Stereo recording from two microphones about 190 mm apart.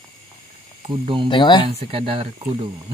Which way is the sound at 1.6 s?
30° right (ahead or behind).